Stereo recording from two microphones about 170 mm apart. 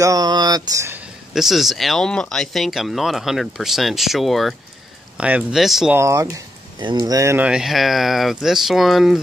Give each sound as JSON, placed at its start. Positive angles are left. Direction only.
{"t": 0.0, "sound": "speech", "side_deg": -20}
{"t": 1.3, "sound": "speech", "side_deg": 0}
{"t": 5.9, "sound": "speech", "side_deg": -15}